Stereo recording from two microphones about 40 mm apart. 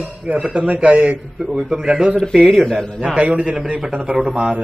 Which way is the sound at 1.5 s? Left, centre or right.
Centre.